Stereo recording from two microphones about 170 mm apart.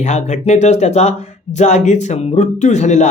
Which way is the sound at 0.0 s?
45° left (ahead or behind).